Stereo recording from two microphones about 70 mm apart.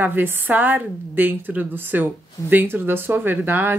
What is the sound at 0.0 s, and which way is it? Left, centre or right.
A woman's voice, right.